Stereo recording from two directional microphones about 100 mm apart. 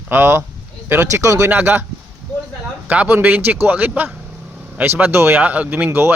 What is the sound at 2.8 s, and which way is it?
Speech, 15° right (ahead or behind).